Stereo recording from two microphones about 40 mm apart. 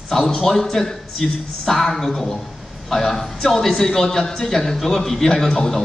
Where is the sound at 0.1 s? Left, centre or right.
Centre.